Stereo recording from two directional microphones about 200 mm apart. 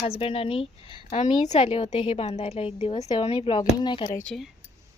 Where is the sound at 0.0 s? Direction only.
30° left (ahead or behind).